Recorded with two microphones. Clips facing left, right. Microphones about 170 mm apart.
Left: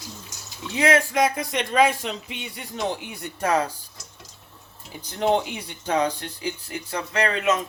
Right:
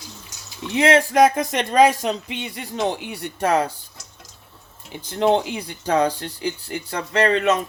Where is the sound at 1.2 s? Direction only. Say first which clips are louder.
Right 6 dB; 45° right (ahead or behind).